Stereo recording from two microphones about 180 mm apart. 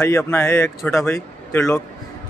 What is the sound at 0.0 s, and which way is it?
Speech, 15° left (ahead or behind).